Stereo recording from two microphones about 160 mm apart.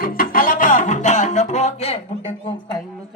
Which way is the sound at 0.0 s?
60° left (ahead or behind).